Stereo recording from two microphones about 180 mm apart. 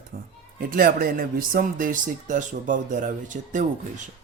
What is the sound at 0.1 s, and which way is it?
Speech, 50° right (ahead or behind).